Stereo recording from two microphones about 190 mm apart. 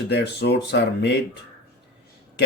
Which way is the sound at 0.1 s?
60° left (ahead or behind).